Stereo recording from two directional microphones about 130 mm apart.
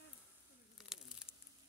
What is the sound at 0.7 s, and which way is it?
Crumpling, 5° right (ahead or behind).